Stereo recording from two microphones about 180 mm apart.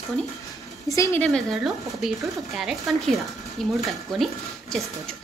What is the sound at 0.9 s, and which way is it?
Speech, 15° left (ahead or behind).